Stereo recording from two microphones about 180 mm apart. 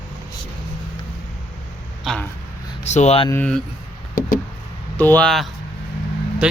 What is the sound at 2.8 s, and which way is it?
Speech, 40° left (ahead or behind).